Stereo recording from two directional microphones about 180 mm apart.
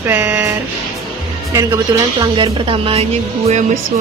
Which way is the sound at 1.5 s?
15° right (ahead or behind).